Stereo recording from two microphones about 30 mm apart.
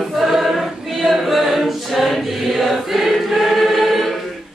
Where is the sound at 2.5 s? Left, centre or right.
Centre.